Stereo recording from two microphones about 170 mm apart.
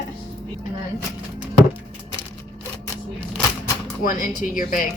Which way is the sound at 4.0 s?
55° left (ahead or behind).